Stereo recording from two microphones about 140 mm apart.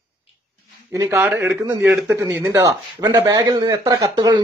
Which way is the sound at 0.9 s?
20° right (ahead or behind).